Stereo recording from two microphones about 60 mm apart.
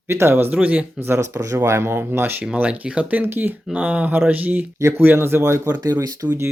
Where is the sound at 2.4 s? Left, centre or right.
Right.